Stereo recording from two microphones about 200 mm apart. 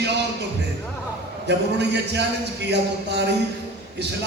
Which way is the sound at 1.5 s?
60° right (ahead or behind).